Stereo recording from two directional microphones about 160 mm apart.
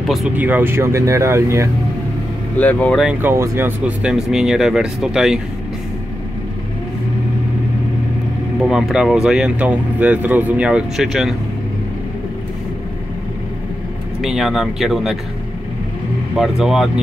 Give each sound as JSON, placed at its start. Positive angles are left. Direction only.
{"t": 0.0, "sound": "a sound", "side_deg": 0}
{"t": 0.4, "sound": "speech", "side_deg": -10}
{"t": 2.6, "sound": "speech", "side_deg": 10}
{"t": 3.0, "sound": "speech", "side_deg": -10}
{"t": 8.5, "sound": "speech", "side_deg": -5}
{"t": 14.2, "sound": "speech", "side_deg": 0}
{"t": 16.3, "sound": "speech", "side_deg": 0}